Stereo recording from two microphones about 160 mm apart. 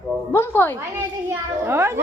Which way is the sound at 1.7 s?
15° right (ahead or behind).